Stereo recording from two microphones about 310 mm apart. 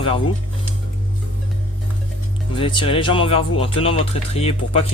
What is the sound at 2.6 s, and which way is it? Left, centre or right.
Speech, centre.